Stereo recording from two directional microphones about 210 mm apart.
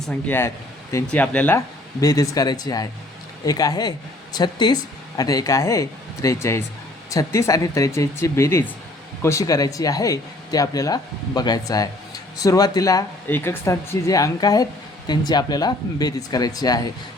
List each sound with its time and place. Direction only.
0.0 s speech: 5° left (ahead or behind)